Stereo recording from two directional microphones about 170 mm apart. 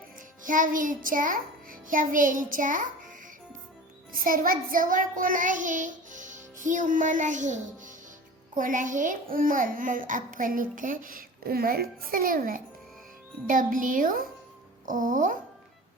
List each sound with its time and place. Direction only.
0.4 s a child's voice: 50° right (ahead or behind)
4.1 s child singing: 55° right (ahead or behind)
8.5 s a child's voice: 50° right (ahead or behind)